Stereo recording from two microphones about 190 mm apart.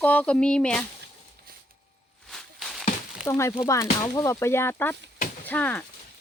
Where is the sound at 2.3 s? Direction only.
Centre (ahead or behind).